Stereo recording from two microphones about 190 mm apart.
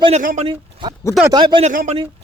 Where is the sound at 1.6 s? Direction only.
40° right (ahead or behind).